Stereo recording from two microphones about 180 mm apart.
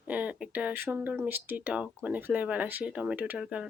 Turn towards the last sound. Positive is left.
turn(degrees=-5)  # may be behind; listen again after turning